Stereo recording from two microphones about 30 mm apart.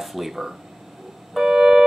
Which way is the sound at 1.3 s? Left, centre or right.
Centre.